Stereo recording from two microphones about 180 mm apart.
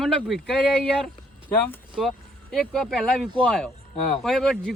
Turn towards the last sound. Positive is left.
turn(degrees=0)  # may be behind; listen again after turning